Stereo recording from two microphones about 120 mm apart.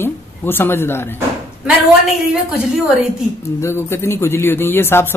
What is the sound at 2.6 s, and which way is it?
Speech, centre (ahead or behind).